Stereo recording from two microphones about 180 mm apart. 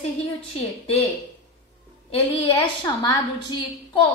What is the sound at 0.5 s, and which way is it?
Speech, 30° left (ahead or behind).